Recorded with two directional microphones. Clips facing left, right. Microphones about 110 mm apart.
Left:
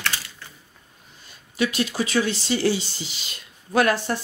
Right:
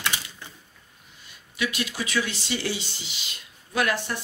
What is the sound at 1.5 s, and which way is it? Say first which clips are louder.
Speech: left 6 dB; 35° left (ahead or behind).